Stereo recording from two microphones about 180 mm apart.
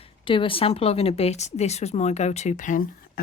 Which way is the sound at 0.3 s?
30° left (ahead or behind).